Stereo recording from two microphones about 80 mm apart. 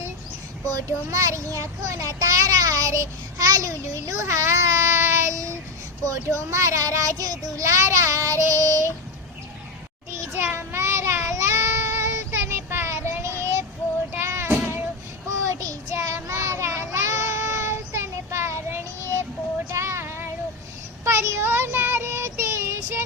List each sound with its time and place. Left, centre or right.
0.7 s a child's voice: right
6.1 s child singing: right
10.1 s child singing: right
15.4 s child singing: right